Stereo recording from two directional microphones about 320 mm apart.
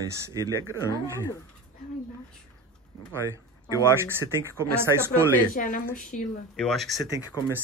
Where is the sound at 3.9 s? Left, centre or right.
Centre.